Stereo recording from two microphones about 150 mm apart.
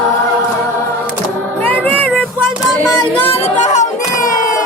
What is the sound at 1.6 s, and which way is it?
Music, 10° left (ahead or behind).